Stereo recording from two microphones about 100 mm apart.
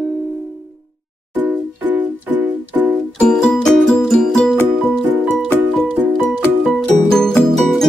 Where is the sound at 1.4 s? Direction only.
20° right (ahead or behind).